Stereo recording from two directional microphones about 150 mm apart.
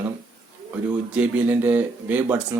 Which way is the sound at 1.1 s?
10° right (ahead or behind).